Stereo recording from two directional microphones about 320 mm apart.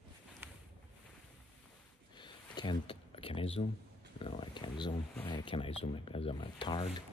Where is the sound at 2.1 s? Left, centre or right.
Centre.